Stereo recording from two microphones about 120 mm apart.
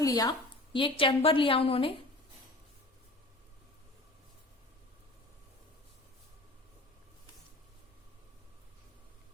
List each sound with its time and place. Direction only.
0.0 s a woman's voice: 30° left (ahead or behind)
0.7 s a woman's voice: 45° left (ahead or behind)